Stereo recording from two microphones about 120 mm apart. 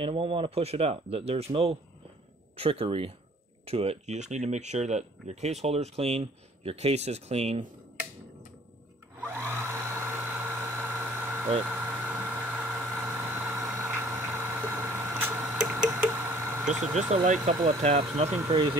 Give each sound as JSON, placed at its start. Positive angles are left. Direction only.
{"t": 0.0, "sound": "speech", "side_deg": -50}
{"t": 9.2, "sound": "a sound", "side_deg": -20}
{"t": 11.6, "sound": "vehicle", "side_deg": -20}
{"t": 15.9, "sound": "a sound", "side_deg": -20}
{"t": 17.1, "sound": "speech", "side_deg": -70}
{"t": 18.5, "sound": "speech", "side_deg": -40}